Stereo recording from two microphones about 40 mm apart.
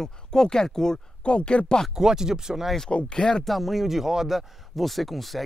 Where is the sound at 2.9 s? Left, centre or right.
Left.